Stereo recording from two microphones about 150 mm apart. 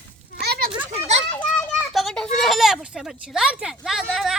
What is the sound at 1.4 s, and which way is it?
Children playing, 10° left (ahead or behind).